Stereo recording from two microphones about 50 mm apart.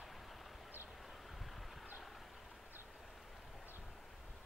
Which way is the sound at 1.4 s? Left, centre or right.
Centre.